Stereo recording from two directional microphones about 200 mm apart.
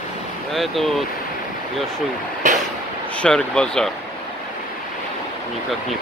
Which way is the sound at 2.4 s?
40° right (ahead or behind).